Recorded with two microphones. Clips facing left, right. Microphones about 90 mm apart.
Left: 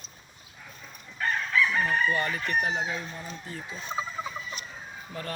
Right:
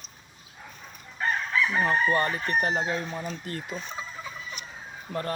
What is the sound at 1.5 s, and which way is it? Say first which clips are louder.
Chicken: even; 25° right (ahead or behind).